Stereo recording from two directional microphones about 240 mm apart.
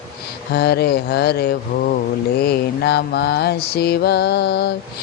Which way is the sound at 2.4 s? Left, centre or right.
Left.